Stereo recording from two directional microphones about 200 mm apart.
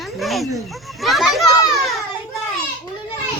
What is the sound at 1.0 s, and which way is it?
Children playing, centre (ahead or behind).